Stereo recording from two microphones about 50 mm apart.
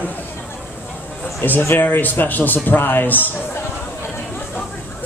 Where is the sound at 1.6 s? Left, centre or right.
Left.